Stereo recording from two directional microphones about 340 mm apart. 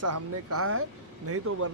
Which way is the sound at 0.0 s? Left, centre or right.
Right.